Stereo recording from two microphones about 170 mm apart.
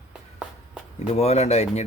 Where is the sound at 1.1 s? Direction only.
40° left (ahead or behind).